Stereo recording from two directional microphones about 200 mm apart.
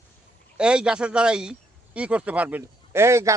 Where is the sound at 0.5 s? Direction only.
5° right (ahead or behind).